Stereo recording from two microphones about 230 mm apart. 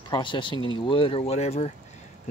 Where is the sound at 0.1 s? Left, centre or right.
Left.